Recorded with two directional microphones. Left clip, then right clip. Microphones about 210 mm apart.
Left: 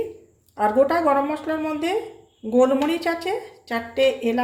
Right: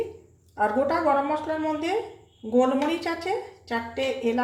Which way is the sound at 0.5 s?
25° left (ahead or behind).